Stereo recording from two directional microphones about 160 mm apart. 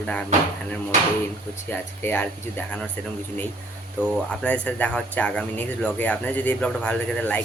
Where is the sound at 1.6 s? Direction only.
15° left (ahead or behind).